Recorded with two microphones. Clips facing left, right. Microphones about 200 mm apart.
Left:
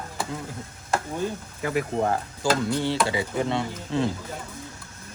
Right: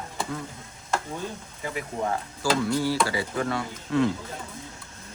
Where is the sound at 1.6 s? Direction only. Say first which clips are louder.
Left 7 dB; 60° left (ahead or behind).